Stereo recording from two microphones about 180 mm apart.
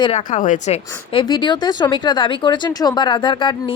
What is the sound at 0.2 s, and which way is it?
Speech, 45° left (ahead or behind).